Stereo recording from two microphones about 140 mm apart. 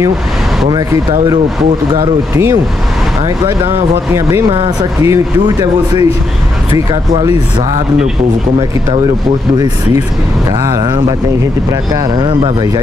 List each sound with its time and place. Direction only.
2.0 s speech: 25° right (ahead or behind)
4.5 s speech: 40° right (ahead or behind)
5.0 s speech: 25° right (ahead or behind)
10.6 s speech: 25° right (ahead or behind)
12.3 s speech: 35° right (ahead or behind)